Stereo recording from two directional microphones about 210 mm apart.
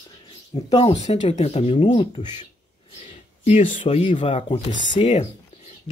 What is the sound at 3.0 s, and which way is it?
Speech, 35° left (ahead or behind).